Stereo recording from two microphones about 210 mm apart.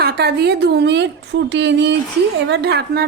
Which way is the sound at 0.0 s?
50° right (ahead or behind).